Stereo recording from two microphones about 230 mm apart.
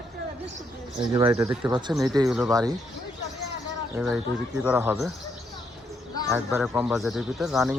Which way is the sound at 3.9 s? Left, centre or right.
Centre.